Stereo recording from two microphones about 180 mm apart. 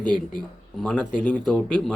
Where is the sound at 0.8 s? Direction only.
5° left (ahead or behind).